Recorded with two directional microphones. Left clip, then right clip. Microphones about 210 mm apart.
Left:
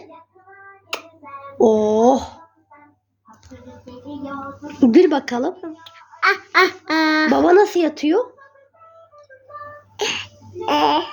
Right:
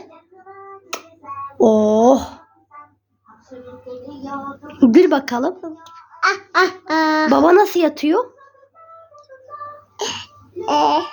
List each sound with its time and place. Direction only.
0.9 s hands: 10° right (ahead or behind)
1.5 s speech: 20° right (ahead or behind)
4.6 s a child's voice: 20° right (ahead or behind)
7.3 s speech: 20° right (ahead or behind)
10.0 s sneeze: 5° right (ahead or behind)
10.7 s babbling: 5° right (ahead or behind)